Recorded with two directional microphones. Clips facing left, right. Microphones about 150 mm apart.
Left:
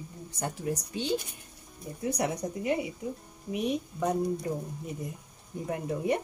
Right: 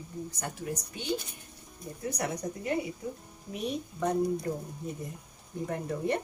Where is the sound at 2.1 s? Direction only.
20° left (ahead or behind).